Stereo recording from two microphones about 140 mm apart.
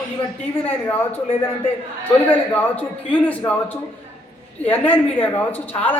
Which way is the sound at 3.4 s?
25° left (ahead or behind).